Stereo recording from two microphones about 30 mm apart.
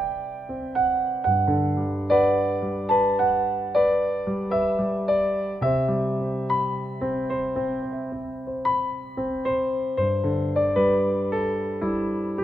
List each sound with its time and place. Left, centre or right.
0.8 s music: right
1.3 s music: centre
9.5 s music: centre